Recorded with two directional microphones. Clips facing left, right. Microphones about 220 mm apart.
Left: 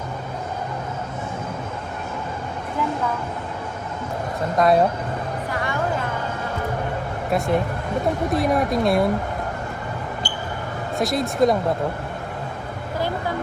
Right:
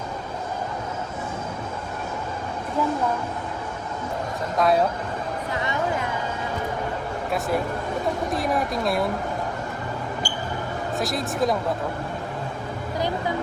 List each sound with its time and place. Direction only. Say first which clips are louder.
4.5 s a woman's voice: left 3 dB; centre (ahead or behind)
5.5 s speech: left 1 dB; 20° right (ahead or behind)
7.3 s a woman's voice: left 4 dB; centre (ahead or behind)
10.9 s a woman's voice: left 5 dB; centre (ahead or behind)